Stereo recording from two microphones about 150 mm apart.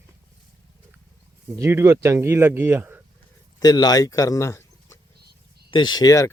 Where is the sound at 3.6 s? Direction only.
25° left (ahead or behind).